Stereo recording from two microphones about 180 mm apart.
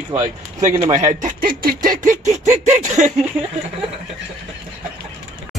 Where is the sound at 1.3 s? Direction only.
55° right (ahead or behind).